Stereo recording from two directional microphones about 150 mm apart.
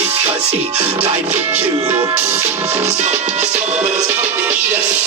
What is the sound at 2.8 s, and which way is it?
Music, 45° right (ahead or behind).